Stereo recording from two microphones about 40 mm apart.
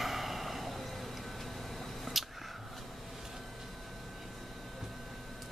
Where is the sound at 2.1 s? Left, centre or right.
Centre.